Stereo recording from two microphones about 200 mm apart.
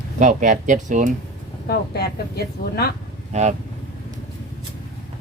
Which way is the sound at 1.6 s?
50° left (ahead or behind).